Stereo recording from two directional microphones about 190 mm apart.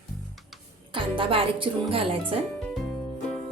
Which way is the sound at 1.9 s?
30° right (ahead or behind).